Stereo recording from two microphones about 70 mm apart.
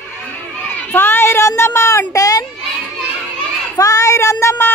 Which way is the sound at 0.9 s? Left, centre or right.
Left.